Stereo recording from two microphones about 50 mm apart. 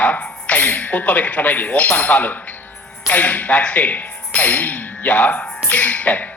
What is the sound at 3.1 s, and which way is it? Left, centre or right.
Speech, left.